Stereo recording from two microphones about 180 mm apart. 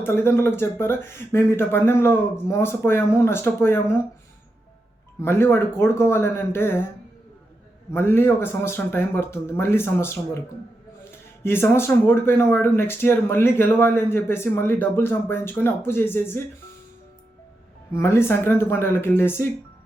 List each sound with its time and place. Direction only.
0.0 s speech: 15° left (ahead or behind)
5.2 s speech: 15° left (ahead or behind)
7.9 s speech: 15° left (ahead or behind)
11.4 s speech: 15° left (ahead or behind)
17.9 s speech: 15° left (ahead or behind)